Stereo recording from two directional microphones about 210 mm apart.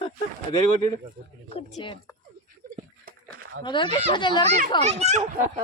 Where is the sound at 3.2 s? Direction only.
85° right.